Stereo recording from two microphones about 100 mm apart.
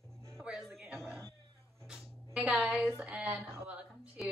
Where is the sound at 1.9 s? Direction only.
5° right (ahead or behind).